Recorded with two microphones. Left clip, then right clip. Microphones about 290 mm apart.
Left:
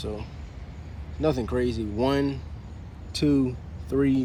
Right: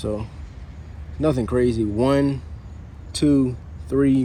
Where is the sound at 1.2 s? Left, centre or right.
Right.